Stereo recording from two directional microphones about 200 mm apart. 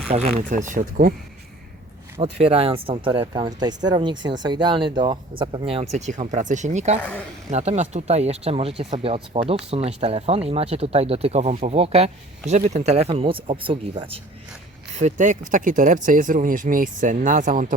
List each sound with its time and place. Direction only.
0.1 s speech: 35° right (ahead or behind)
2.2 s speech: 30° right (ahead or behind)
7.0 s speech: 10° left (ahead or behind)
7.5 s speech: 35° right (ahead or behind)